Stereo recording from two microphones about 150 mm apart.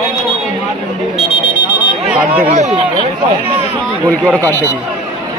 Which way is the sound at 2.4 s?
50° right (ahead or behind).